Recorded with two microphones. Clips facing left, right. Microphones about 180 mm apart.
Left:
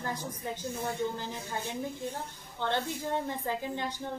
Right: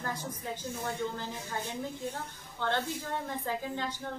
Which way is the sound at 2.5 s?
15° left (ahead or behind).